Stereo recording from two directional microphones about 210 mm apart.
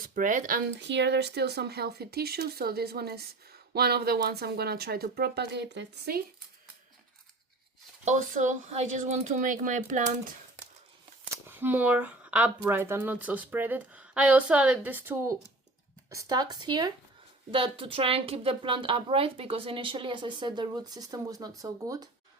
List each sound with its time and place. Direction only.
0.1 s speech: 40° right (ahead or behind)
0.8 s speech: 55° right (ahead or behind)
8.0 s speech: 35° right (ahead or behind)
11.4 s a woman's voice: 10° right (ahead or behind)